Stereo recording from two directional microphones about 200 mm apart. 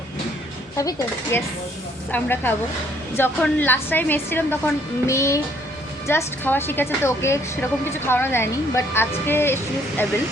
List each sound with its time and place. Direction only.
0.8 s a woman's voice: 15° left (ahead or behind)